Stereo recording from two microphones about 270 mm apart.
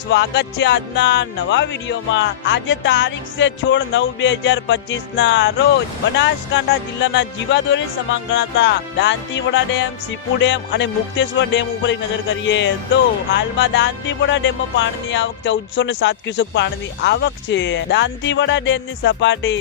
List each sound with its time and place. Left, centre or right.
0.1 s music: left